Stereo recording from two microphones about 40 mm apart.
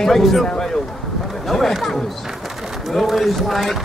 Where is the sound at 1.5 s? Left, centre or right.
Centre.